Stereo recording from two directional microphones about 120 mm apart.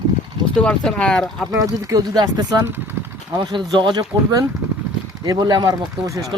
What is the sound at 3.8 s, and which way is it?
Speech, 40° right (ahead or behind).